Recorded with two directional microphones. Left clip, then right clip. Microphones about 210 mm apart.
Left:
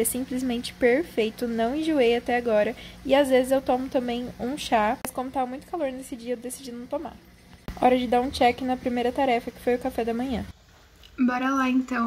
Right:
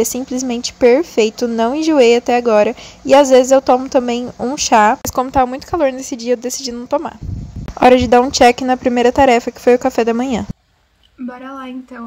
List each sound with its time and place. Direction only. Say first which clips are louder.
0.0 s a woman's voice: right 10 dB; 25° right (ahead or behind)
11.1 s speech: left 4 dB; 5° right (ahead or behind)